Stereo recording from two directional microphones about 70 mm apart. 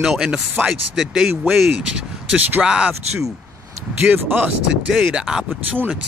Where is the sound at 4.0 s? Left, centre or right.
Right.